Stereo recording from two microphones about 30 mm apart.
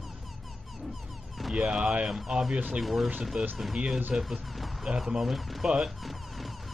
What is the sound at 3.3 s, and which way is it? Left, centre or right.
Speech, right.